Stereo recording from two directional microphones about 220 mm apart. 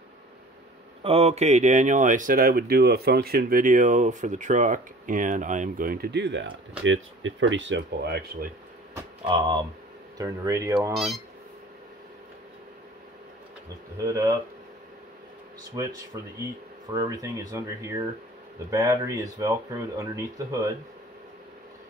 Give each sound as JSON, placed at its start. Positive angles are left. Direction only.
{"t": 1.0, "sound": "speech", "side_deg": -25}
{"t": 9.2, "sound": "speech", "side_deg": -25}
{"t": 10.9, "sound": "speech", "side_deg": 0}
{"t": 14.0, "sound": "speech", "side_deg": -15}
{"t": 15.8, "sound": "speech", "side_deg": -15}